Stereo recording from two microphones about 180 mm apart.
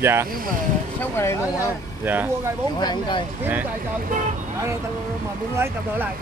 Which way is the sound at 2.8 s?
25° left (ahead or behind).